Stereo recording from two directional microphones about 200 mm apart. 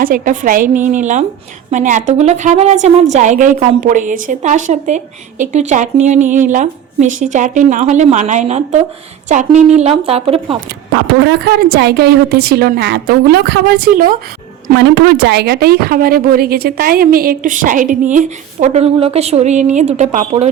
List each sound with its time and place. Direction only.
0.0 s a woman's voice: 45° right (ahead or behind); by 10.6 s 30° right (ahead or behind)
10.9 s a woman's voice: 55° right (ahead or behind)
14.8 s a woman's voice: 55° right (ahead or behind); by 20.5 s 30° right (ahead or behind)